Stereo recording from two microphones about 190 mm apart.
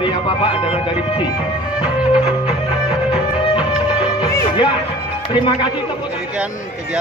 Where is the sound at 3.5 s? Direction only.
25° left (ahead or behind).